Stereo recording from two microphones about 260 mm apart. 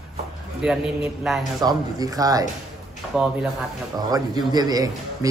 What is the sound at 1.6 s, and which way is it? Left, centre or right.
Speech, centre.